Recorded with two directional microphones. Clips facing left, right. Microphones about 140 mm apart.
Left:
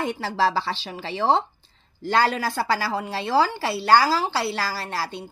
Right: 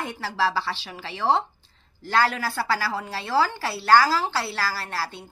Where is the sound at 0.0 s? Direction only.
20° left (ahead or behind).